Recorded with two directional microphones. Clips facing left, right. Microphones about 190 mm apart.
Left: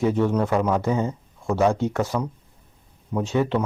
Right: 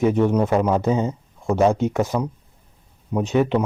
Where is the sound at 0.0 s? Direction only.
15° right (ahead or behind).